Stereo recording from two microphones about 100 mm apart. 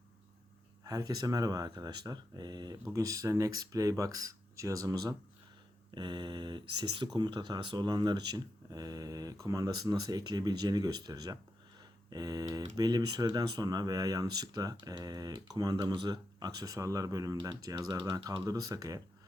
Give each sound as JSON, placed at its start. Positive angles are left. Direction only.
{"t": 0.9, "sound": "speech", "side_deg": -40}
{"t": 5.9, "sound": "speech", "side_deg": -45}